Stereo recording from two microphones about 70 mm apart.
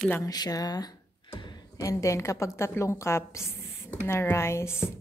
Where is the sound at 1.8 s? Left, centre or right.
Left.